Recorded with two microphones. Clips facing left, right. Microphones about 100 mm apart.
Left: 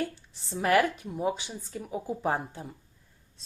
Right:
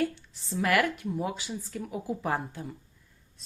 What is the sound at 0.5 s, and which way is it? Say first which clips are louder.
A woman's voice: left 2 dB; 30° left (ahead or behind).